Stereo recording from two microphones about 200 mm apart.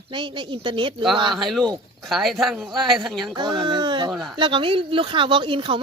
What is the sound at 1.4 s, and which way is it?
Speech, centre (ahead or behind).